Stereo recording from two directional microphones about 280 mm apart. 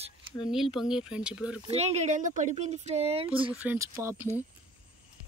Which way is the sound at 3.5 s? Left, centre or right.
Centre.